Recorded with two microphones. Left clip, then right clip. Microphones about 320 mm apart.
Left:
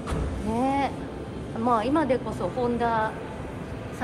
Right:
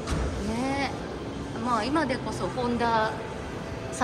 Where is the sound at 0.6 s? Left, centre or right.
Centre.